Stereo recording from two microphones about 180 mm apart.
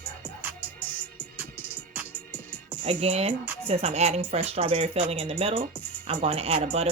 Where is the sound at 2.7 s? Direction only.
30° right (ahead or behind).